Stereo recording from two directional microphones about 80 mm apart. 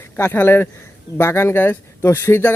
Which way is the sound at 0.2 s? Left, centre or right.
Left.